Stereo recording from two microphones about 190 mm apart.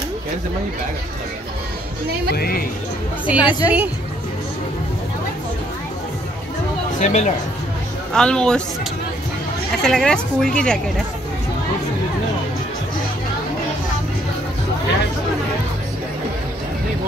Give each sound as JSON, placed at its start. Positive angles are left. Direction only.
{"t": 2.3, "sound": "speech", "side_deg": 55}
{"t": 3.3, "sound": "a woman's voice", "side_deg": -5}
{"t": 7.0, "sound": "speech", "side_deg": 40}
{"t": 8.1, "sound": "a woman's voice", "side_deg": 5}
{"t": 9.8, "sound": "a woman's voice", "side_deg": 5}